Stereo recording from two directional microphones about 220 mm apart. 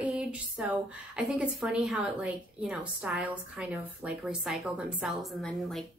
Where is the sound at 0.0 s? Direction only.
5° right (ahead or behind).